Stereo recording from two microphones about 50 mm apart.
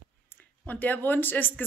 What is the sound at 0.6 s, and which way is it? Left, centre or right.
Speech, left.